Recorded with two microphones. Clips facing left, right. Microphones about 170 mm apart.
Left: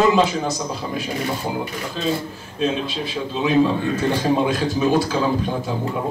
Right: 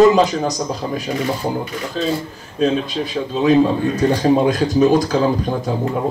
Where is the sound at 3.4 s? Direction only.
40° right (ahead or behind).